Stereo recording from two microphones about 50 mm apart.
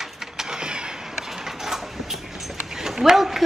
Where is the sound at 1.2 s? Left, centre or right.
Centre.